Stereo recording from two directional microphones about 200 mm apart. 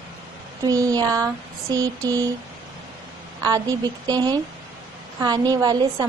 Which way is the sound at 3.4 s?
20° right (ahead or behind).